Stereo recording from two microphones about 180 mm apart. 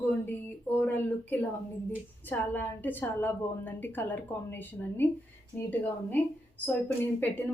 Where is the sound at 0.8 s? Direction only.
10° left (ahead or behind).